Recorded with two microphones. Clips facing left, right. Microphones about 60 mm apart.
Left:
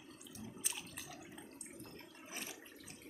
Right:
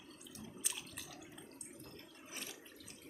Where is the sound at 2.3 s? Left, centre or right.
Centre.